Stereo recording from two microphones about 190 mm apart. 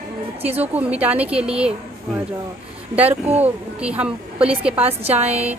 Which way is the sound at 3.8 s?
5° right (ahead or behind).